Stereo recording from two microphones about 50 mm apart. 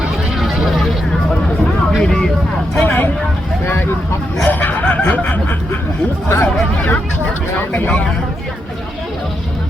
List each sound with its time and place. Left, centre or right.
0.3 s a sound: centre
2.0 s vehicle: centre
2.7 s speech: left
4.4 s speech: left
6.2 s speech: left
7.7 s speech: left